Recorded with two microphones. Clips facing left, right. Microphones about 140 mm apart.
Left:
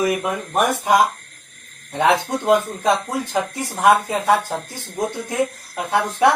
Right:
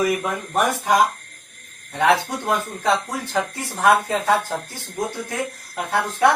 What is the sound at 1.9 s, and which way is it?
Speech, 20° left (ahead or behind).